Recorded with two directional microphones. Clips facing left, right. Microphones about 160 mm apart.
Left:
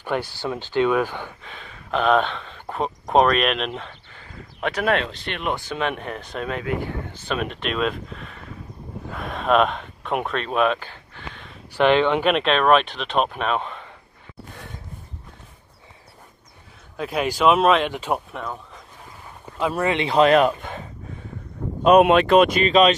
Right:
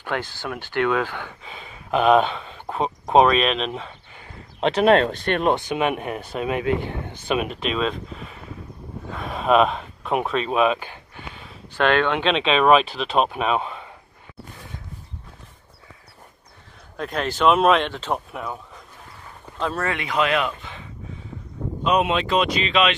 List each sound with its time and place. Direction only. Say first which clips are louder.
0.0 s speech: left 2 dB; 15° left (ahead or behind)
1.4 s speech: right 1 dB; 5° right (ahead or behind)
4.6 s speech: right 6 dB; 25° right (ahead or behind)
5.0 s speech: right 8 dB; 50° right (ahead or behind)
5.7 s speech: right 3 dB; 10° right (ahead or behind)
6.6 s speech: right 3 dB; 25° right (ahead or behind)
7.2 s speech: right 3 dB; 5° right (ahead or behind)
10.8 s a sound: right 1 dB; 15° right (ahead or behind)
11.7 s speech: left 2 dB; 15° left (ahead or behind); by 13.8 s 5° right (ahead or behind)
16.9 s speech: left 2 dB; 5° left (ahead or behind)
17.8 s speech: left 2 dB; 10° left (ahead or behind)
18.3 s speech: even; 5° right (ahead or behind)
19.6 s speech: left 4 dB; 15° left (ahead or behind); by 20.9 s 45° left (ahead or behind)
21.8 s speech: left 7 dB; 55° left (ahead or behind)